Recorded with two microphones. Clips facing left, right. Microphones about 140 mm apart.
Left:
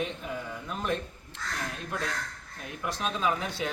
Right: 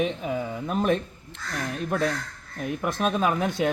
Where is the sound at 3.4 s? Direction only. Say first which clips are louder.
Right 9 dB; 15° right (ahead or behind).